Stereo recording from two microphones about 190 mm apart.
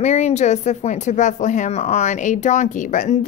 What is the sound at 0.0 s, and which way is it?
Speech, 35° left (ahead or behind).